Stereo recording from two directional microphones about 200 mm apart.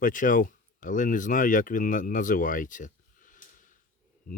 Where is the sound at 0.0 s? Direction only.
40° left (ahead or behind).